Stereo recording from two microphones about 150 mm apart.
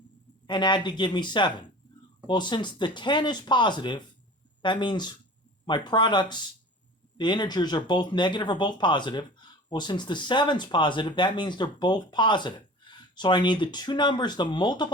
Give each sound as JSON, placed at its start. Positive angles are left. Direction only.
{"t": 0.4, "sound": "speech", "side_deg": 30}